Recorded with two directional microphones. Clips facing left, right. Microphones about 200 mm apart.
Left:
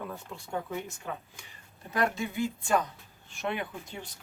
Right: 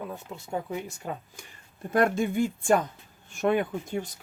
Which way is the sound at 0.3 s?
20° right (ahead or behind).